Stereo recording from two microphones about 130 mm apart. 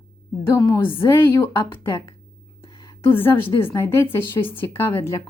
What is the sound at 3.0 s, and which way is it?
A woman's voice, 15° left (ahead or behind).